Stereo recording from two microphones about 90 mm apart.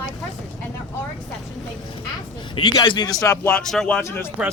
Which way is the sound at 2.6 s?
60° left (ahead or behind).